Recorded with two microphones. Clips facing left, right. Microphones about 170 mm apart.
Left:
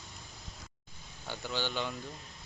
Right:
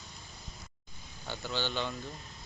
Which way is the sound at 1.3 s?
10° left (ahead or behind).